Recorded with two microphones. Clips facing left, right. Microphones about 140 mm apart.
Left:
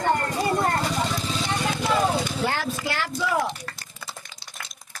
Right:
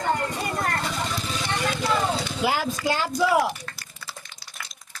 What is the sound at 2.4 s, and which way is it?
Speech, 10° right (ahead or behind).